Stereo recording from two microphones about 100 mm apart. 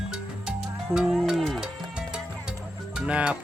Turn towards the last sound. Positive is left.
turn(degrees=-10)  # may be behind; listen again after turning